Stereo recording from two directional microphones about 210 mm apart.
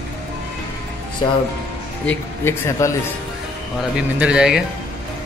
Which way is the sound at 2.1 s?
10° left (ahead or behind).